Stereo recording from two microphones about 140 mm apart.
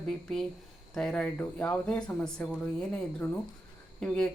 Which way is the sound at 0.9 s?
5° left (ahead or behind).